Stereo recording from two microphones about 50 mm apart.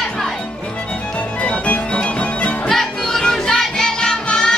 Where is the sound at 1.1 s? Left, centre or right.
Left.